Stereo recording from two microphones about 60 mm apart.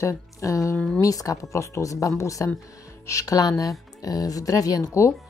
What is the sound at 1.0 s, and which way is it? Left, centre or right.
Speech, left.